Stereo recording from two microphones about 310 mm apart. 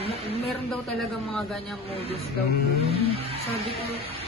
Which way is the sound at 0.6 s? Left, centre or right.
Centre.